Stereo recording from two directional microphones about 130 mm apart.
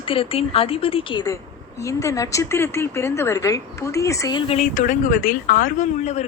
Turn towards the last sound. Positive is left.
turn(degrees=60)  # may be behind; listen again after turning